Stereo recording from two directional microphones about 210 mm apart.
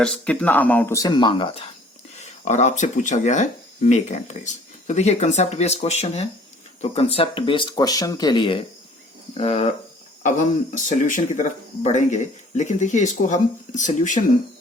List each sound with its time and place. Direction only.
0.0 s speech: 5° left (ahead or behind); by 1.6 s 25° left (ahead or behind)
2.2 s speech: 35° left (ahead or behind)
10.8 s speech: 35° left (ahead or behind)